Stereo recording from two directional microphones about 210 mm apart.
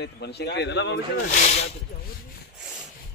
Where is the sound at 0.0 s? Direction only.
50° left (ahead or behind).